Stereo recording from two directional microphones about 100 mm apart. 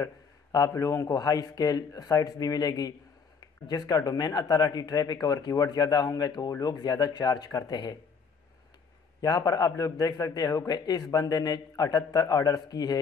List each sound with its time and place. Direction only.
0.0 s a man's voice: 35° left (ahead or behind)
9.2 s a man's voice: 40° left (ahead or behind)